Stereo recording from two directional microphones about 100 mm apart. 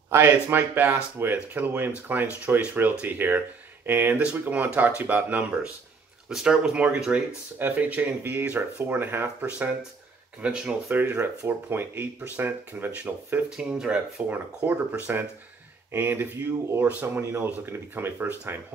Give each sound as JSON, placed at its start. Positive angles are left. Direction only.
{"t": 0.1, "sound": "speech", "side_deg": -25}
{"t": 10.9, "sound": "speech", "side_deg": -20}